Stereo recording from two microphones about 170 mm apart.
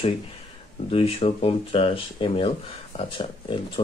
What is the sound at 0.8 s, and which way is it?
Speech, 35° left (ahead or behind).